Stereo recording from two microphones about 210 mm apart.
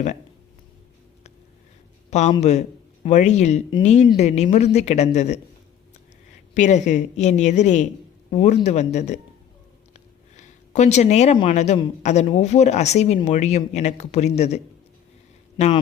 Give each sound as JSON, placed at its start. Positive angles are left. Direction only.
{"t": 2.0, "sound": "a man's voice", "side_deg": 35}
{"t": 6.5, "sound": "a man's voice", "side_deg": 35}
{"t": 10.3, "sound": "a man's voice", "side_deg": 35}